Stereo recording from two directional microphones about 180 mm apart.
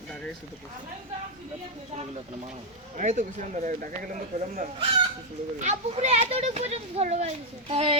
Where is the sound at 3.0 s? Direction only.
40° right (ahead or behind).